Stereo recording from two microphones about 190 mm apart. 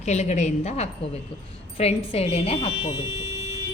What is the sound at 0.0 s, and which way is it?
A woman's voice, 35° left (ahead or behind).